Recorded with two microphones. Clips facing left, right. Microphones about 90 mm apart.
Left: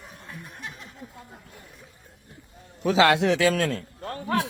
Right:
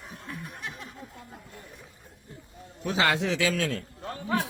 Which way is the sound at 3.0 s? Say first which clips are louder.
Left 6 dB; 70° left (ahead or behind).